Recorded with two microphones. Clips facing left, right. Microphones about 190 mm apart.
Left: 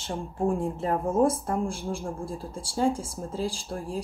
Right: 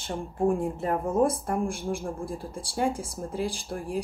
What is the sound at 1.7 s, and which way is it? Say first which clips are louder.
Speech: right 1 dB; 15° right (ahead or behind).